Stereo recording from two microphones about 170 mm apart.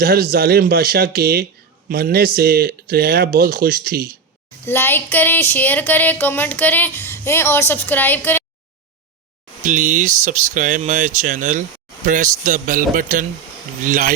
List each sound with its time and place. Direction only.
0.0 s speech: 60° right (ahead or behind)
4.6 s a sound: 15° left (ahead or behind)
9.6 s speech: 50° right (ahead or behind)